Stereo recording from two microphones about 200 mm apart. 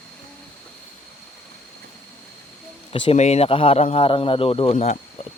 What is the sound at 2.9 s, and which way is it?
A man's voice, 30° left (ahead or behind).